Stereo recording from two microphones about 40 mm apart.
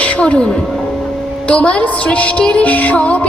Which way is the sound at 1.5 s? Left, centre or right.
Left.